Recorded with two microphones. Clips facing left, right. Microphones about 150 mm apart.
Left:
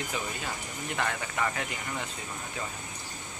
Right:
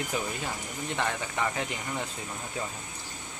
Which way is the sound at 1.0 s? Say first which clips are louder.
Even; 15° right (ahead or behind).